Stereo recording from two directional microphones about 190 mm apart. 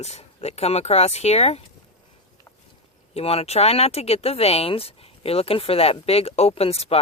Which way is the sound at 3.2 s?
30° left (ahead or behind).